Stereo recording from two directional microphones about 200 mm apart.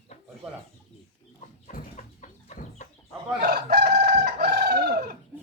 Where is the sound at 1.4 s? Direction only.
40° left (ahead or behind).